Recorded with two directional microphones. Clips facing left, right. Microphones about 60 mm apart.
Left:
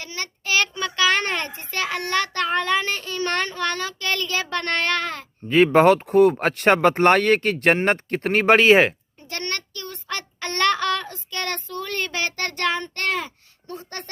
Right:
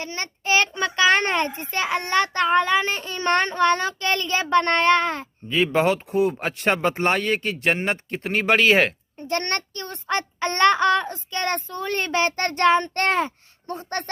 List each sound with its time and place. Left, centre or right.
0.0 s a child's voice: right
5.5 s speech: left
8.3 s speech: left
9.2 s a child's voice: right